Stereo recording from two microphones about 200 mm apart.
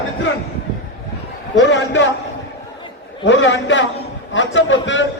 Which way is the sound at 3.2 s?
65° left (ahead or behind).